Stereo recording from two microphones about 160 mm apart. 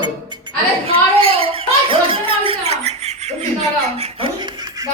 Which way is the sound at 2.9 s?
45° right (ahead or behind).